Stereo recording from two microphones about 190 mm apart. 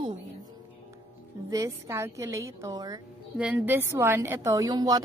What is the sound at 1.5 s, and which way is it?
A woman's voice, 15° right (ahead or behind).